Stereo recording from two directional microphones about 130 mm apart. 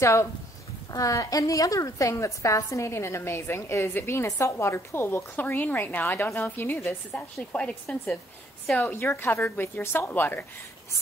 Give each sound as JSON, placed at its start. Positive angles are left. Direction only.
{"t": 0.0, "sound": "a woman's voice", "side_deg": 20}